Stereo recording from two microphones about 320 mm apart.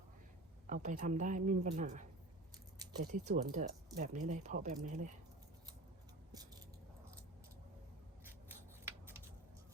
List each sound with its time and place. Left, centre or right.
0.7 s speech: right
6.3 s a sound: centre
8.2 s scissors: centre